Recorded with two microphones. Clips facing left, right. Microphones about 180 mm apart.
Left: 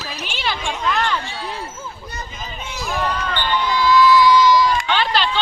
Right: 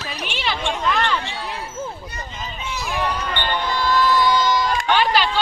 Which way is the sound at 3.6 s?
50° right (ahead or behind).